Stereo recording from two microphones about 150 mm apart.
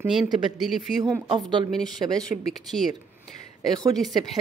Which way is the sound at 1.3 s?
35° right (ahead or behind).